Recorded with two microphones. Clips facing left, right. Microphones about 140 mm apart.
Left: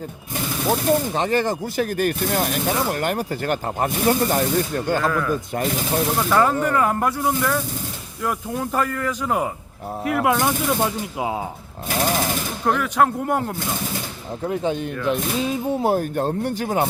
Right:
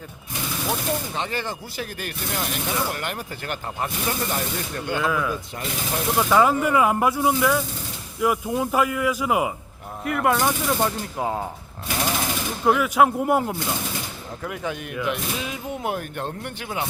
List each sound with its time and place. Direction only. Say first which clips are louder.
0.7 s speech: left 8 dB; 40° left (ahead or behind)
5.0 s speech: left 2 dB; 5° right (ahead or behind)
5.3 s speech: left 7 dB; 45° left (ahead or behind)
6.1 s speech: right 2 dB; 10° right (ahead or behind)
10.0 s speech: left 2 dB; centre (ahead or behind)
12.6 s speech: right 1 dB; 5° right (ahead or behind)
14.4 s speech: left 7 dB; 30° left (ahead or behind); by 16.9 s 45° left (ahead or behind)